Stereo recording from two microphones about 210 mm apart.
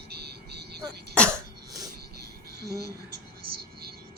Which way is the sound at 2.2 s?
50° right (ahead or behind).